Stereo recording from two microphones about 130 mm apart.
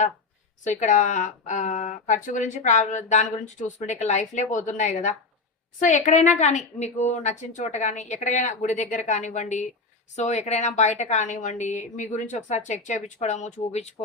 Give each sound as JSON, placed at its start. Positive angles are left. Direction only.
{"t": 0.6, "sound": "a woman's voice", "side_deg": 70}